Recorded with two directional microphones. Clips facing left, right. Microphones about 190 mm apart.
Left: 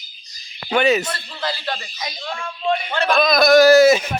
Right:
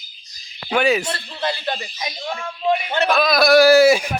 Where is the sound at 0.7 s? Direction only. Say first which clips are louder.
Left 1 dB; 10° right (ahead or behind).